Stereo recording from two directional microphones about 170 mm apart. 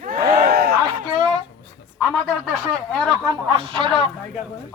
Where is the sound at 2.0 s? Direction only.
5° left (ahead or behind).